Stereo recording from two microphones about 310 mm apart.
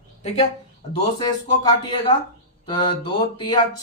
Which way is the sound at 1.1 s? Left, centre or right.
Centre.